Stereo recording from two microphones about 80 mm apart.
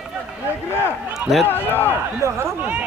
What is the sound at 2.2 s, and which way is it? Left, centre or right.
Speech, right.